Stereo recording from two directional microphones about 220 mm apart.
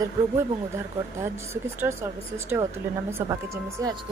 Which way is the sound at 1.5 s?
10° right (ahead or behind).